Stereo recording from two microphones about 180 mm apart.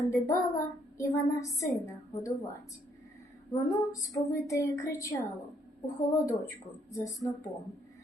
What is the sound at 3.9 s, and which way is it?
A woman's voice, 20° left (ahead or behind).